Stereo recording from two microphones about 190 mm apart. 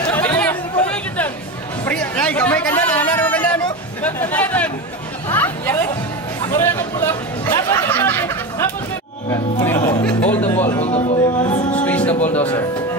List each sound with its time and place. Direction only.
0.1 s chatter: 10° left (ahead or behind)
1.9 s a sound: 5° left (ahead or behind)
5.3 s chatter: 10° left (ahead or behind)
9.3 s music: 20° left (ahead or behind)
10.0 s music: 10° left (ahead or behind)
10.8 s a man's voice: 35° left (ahead or behind)
11.7 s a capella: 5° left (ahead or behind)
12.2 s a man's voice: 35° left (ahead or behind)